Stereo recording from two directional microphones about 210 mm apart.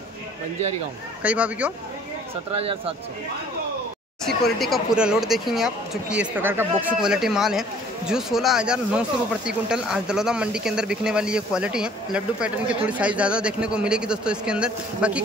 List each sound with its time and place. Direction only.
1.2 s speech: 5° right (ahead or behind)
2.5 s speech: 25° right (ahead or behind)
4.6 s speech: centre (ahead or behind)